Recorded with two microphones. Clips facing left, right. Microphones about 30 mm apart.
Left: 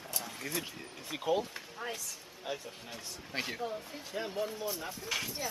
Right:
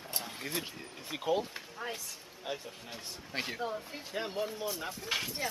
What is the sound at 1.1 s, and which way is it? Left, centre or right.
Speech, centre.